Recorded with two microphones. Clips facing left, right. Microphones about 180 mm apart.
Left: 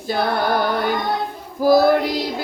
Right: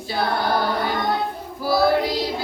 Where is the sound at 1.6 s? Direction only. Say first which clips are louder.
Left 8 dB; 45° left (ahead or behind).